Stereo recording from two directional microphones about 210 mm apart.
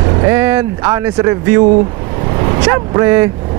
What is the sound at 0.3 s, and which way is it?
Speech, 10° right (ahead or behind).